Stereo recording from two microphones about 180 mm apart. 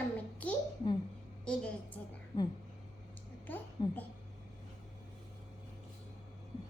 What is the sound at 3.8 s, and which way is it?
Speech, 25° left (ahead or behind).